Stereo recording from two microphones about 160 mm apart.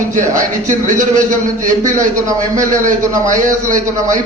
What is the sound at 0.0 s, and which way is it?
A man's voice, 55° right (ahead or behind).